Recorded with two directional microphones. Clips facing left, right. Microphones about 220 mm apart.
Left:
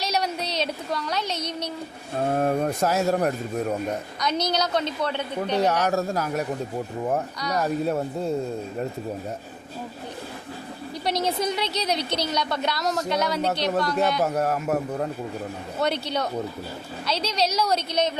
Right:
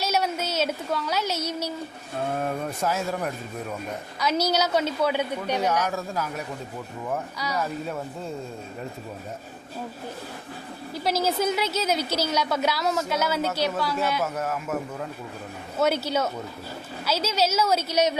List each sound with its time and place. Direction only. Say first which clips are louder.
0.0 s speech: right 1 dB; 5° right (ahead or behind)
2.3 s speech: left 8 dB; 40° left (ahead or behind)
4.2 s a woman's voice: right 3 dB; 5° right (ahead or behind)
5.6 s speech: left 2 dB; 65° left (ahead or behind)
5.9 s a man's voice: left 5 dB; 40° left (ahead or behind)
7.3 s a woman's voice: left 2 dB; 5° right (ahead or behind)
7.6 s speech: left 9 dB; 40° left (ahead or behind)
11.0 s a woman's voice: right 1 dB; 5° right (ahead or behind)
14.2 s speech: left 5 dB; 35° left (ahead or behind)
15.8 s a woman's voice: right 2 dB; 5° right (ahead or behind)